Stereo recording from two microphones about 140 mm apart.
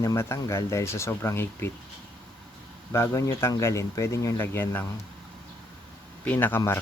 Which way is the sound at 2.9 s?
20° left (ahead or behind).